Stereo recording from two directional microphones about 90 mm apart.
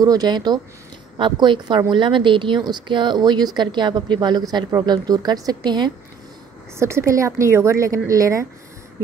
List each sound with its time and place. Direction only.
0.0 s speech: 45° right (ahead or behind)
1.1 s speech: 65° right (ahead or behind)
6.8 s a woman's voice: 30° right (ahead or behind)